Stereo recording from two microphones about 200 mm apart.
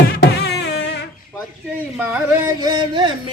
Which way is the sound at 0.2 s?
55° left (ahead or behind).